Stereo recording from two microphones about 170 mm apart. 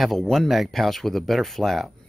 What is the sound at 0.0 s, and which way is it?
Speech, centre (ahead or behind).